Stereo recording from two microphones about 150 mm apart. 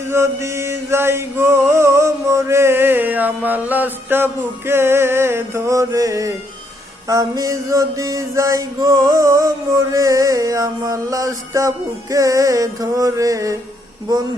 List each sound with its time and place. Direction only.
0.1 s music: 20° right (ahead or behind)